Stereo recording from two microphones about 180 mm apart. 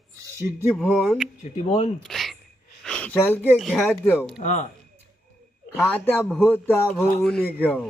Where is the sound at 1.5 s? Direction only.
40° left (ahead or behind).